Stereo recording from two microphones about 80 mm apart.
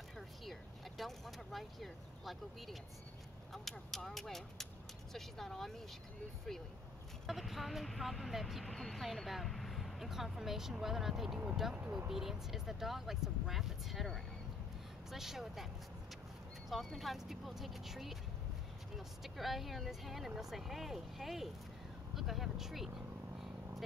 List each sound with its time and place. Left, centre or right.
0.5 s speech: centre
7.2 s speech: centre
11.7 s speech: centre
12.1 s speech: centre